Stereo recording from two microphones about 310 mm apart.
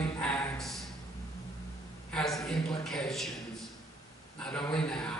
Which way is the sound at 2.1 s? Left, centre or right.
Centre.